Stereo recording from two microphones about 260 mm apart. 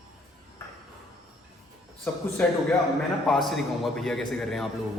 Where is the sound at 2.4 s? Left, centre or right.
Centre.